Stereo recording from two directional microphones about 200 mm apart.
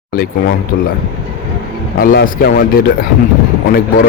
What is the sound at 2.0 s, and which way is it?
Speech, 45° left (ahead or behind).